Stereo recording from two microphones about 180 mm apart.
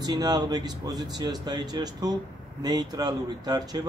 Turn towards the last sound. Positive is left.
turn(degrees=-20)  # may be behind; listen again after turning